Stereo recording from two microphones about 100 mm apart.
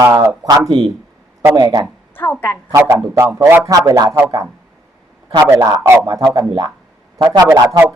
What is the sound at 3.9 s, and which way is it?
Speech, 35° right (ahead or behind).